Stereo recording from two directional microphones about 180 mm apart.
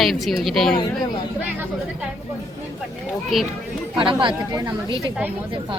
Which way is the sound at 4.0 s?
30° right (ahead or behind).